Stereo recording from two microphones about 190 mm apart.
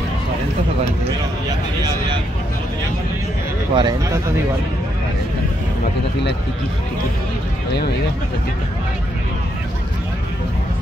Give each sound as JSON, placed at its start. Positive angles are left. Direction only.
{"t": 3.7, "sound": "speech", "side_deg": -25}